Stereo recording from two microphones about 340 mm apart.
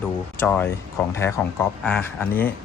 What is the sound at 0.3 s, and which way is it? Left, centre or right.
Speech, centre.